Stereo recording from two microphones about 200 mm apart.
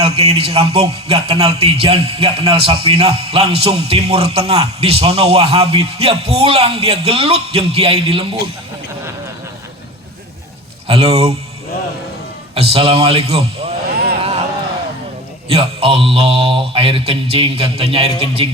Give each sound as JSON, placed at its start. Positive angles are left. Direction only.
{"t": 0.0, "sound": "a man's voice", "side_deg": -30}
{"t": 10.8, "sound": "a man's voice", "side_deg": -30}
{"t": 12.5, "sound": "a man's voice", "side_deg": -30}
{"t": 14.2, "sound": "a sound", "side_deg": -30}
{"t": 15.4, "sound": "a man's voice", "side_deg": -30}